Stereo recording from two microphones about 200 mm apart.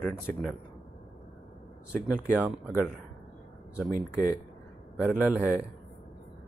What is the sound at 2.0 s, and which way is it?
Speech, 5° right (ahead or behind).